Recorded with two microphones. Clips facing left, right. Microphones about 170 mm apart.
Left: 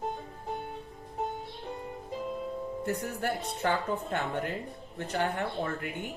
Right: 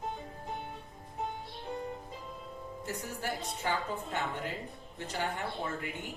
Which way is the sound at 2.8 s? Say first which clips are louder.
Left 5 dB; 60° left (ahead or behind).